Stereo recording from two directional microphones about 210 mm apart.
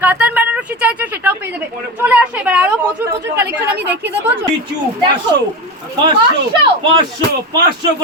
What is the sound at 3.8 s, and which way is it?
Speech, 10° right (ahead or behind).